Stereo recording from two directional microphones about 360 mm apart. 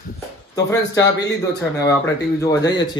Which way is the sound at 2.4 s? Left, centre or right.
Centre.